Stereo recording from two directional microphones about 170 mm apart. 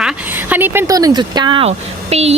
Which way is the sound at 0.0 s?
10° right (ahead or behind).